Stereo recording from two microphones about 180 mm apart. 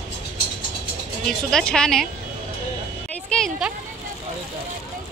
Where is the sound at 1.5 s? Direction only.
5° left (ahead or behind).